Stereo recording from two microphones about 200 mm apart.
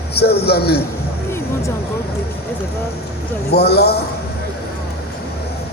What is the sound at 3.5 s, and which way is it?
Speech, 55° left (ahead or behind).